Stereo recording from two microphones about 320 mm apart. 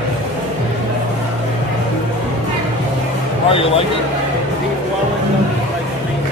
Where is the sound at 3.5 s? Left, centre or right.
Centre.